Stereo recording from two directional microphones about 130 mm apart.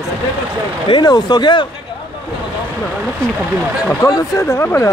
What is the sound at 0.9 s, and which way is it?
Speech, 35° left (ahead or behind).